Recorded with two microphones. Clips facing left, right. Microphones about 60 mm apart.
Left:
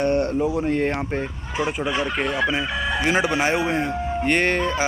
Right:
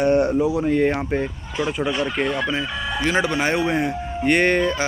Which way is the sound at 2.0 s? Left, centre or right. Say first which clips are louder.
Even; centre.